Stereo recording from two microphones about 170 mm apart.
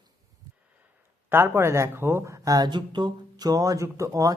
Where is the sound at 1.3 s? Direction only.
15° right (ahead or behind).